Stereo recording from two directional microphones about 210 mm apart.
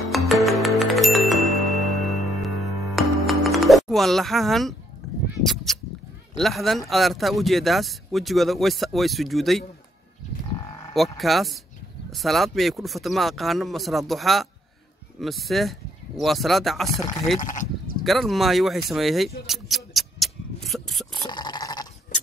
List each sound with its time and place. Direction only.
0.1 s music: centre (ahead or behind)
5.4 s a sound: centre (ahead or behind)
6.3 s speech: centre (ahead or behind)
10.9 s speech: centre (ahead or behind)
17.4 s speech: 40° left (ahead or behind)
18.0 s speech: centre (ahead or behind)
21.1 s a sound: 20° left (ahead or behind)